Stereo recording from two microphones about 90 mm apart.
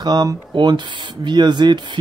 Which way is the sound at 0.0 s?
45° right (ahead or behind).